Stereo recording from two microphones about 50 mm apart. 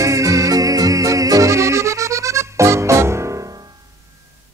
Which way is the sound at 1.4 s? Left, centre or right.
Right.